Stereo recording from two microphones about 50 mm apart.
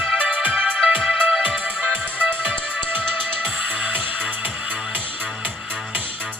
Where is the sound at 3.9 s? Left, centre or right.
Right.